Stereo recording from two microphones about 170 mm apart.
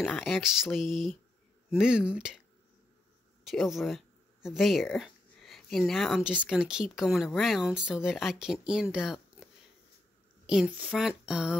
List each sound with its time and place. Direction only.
0.0 s speech: centre (ahead or behind)
3.4 s speech: centre (ahead or behind)
8.9 s a sound: 5° right (ahead or behind)
10.4 s speech: 5° right (ahead or behind)